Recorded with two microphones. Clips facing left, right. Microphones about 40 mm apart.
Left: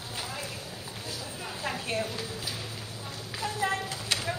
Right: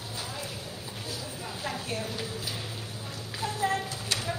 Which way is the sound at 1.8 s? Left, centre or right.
Left.